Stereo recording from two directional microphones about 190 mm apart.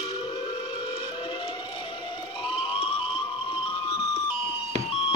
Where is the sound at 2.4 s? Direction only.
25° left (ahead or behind).